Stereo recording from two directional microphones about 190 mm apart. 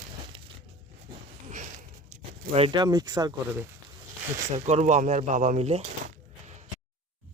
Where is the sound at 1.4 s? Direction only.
40° right (ahead or behind).